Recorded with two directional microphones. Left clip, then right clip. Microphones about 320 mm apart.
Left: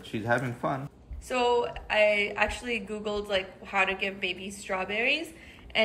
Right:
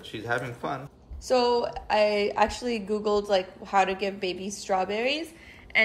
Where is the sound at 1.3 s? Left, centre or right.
Centre.